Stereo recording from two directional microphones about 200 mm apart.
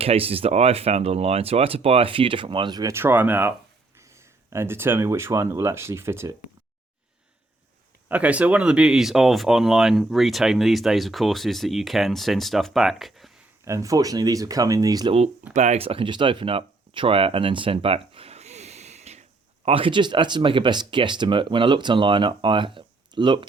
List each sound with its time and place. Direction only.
0.0 s speech: 30° right (ahead or behind); by 6.3 s 15° right (ahead or behind)
8.0 s speech: 5° right (ahead or behind)
13.7 s speech: 15° right (ahead or behind)
15.5 s speech: 35° right (ahead or behind)